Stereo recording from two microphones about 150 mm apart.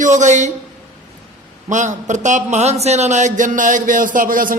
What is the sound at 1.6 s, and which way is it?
A man's voice, 55° right (ahead or behind).